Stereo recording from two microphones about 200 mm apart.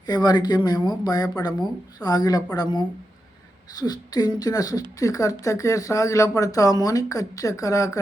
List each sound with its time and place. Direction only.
0.0 s speech: 20° left (ahead or behind)